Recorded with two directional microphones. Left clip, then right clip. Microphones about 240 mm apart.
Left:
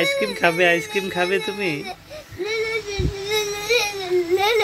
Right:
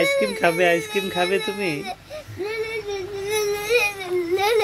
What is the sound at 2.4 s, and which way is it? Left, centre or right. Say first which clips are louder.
Child singing: left 3 dB; centre.